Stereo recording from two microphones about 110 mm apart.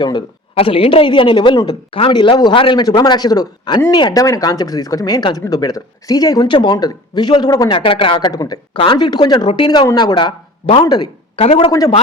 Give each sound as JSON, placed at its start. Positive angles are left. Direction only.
{"t": 0.0, "sound": "speech", "side_deg": 40}
{"t": 0.5, "sound": "a woman's voice", "side_deg": 60}
{"t": 7.7, "sound": "a woman's voice", "side_deg": 55}
{"t": 8.3, "sound": "speech", "side_deg": 35}
{"t": 8.7, "sound": "speech", "side_deg": 55}
{"t": 11.3, "sound": "speech", "side_deg": 60}